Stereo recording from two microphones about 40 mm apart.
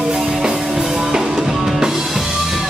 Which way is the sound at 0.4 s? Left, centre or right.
Centre.